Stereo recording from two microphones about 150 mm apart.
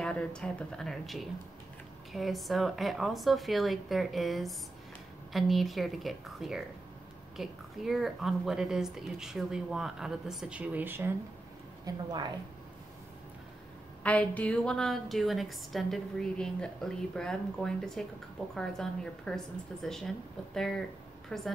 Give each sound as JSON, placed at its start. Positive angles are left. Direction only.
{"t": 0.0, "sound": "a woman's voice", "side_deg": 5}
{"t": 11.8, "sound": "a woman's voice", "side_deg": -30}
{"t": 14.0, "sound": "a woman's voice", "side_deg": 10}